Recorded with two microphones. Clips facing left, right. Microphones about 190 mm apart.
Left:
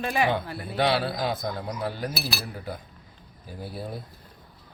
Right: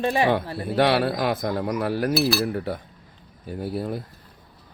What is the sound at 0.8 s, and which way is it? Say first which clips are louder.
Speech: right 4 dB; 70° right (ahead or behind).